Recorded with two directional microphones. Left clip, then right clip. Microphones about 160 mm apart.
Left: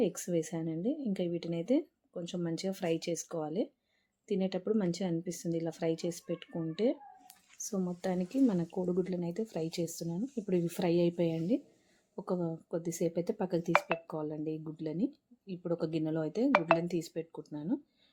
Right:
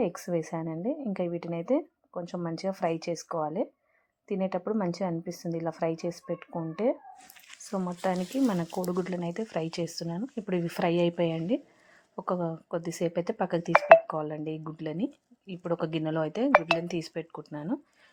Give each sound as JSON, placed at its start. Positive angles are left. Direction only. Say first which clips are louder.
{"t": 0.0, "sound": "speech", "louder": "right 2 dB", "side_deg": -5}
{"t": 7.7, "sound": "speech", "louder": "right 6 dB", "side_deg": -10}
{"t": 13.7, "sound": "speech", "louder": "right 14 dB", "side_deg": -70}
{"t": 14.1, "sound": "speech", "louder": "right 5 dB", "side_deg": -10}